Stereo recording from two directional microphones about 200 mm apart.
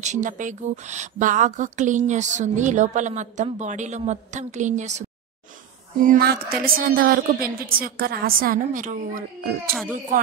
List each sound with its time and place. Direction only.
0.0 s speech: 40° right (ahead or behind)
6.0 s a woman's voice: 50° right (ahead or behind)